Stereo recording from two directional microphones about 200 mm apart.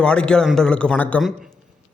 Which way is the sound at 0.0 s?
5° left (ahead or behind).